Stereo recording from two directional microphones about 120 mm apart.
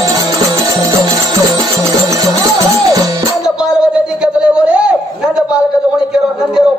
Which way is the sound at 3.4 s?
5° right (ahead or behind).